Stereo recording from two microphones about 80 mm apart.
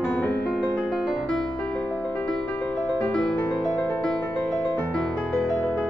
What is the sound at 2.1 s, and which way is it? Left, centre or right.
Music, centre.